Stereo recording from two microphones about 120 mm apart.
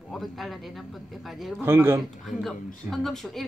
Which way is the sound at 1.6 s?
20° right (ahead or behind).